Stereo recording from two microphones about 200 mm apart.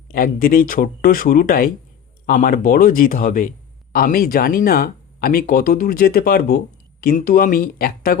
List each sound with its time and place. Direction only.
0.1 s speech: 45° left (ahead or behind)